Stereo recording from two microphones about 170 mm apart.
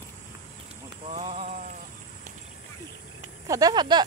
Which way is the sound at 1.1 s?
40° right (ahead or behind).